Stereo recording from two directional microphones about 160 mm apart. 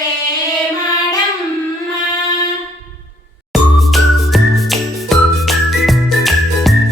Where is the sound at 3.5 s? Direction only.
Centre (ahead or behind).